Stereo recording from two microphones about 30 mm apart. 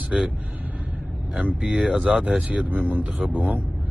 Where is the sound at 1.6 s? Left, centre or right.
Right.